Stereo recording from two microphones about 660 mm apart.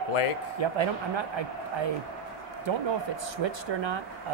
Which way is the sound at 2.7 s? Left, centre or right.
Right.